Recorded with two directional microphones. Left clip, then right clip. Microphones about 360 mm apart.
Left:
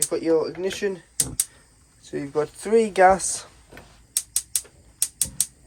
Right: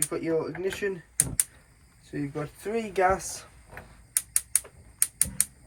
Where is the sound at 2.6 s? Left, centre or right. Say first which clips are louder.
Left 9 dB; centre.